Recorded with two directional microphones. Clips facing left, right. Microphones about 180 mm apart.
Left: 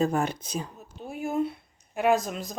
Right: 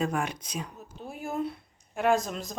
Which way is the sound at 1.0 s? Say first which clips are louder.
Left 4 dB; centre (ahead or behind).